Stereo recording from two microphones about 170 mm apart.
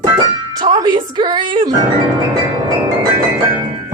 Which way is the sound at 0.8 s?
25° right (ahead or behind).